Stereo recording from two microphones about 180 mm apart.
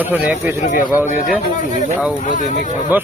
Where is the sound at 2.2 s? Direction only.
45° left (ahead or behind).